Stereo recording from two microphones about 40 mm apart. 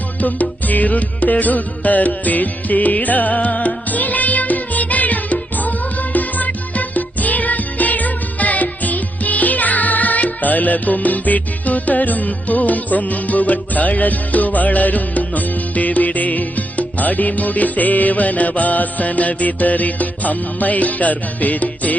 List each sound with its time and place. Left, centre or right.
0.2 s music: left